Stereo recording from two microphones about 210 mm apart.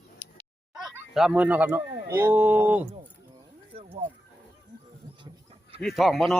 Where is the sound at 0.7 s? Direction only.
Centre (ahead or behind).